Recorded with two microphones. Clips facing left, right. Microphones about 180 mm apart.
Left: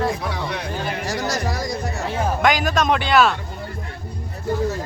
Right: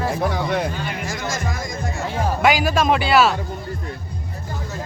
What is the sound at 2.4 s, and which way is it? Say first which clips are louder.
Speech: right 2 dB; 5° right (ahead or behind).